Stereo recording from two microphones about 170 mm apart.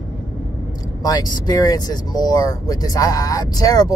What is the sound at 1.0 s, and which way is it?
Speech, 25° left (ahead or behind).